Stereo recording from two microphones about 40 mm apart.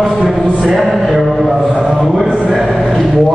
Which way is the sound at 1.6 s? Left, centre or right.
Centre.